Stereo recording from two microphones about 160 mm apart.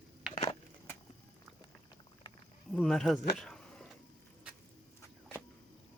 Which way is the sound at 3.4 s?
5° left (ahead or behind).